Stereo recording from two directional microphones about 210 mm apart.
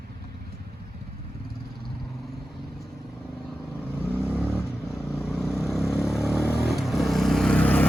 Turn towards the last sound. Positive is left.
turn(degrees=5)  # may be behind; listen again after turning